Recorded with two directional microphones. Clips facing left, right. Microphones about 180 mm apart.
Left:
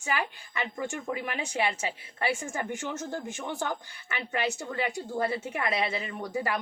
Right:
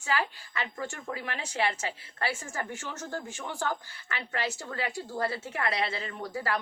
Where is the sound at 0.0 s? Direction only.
20° left (ahead or behind).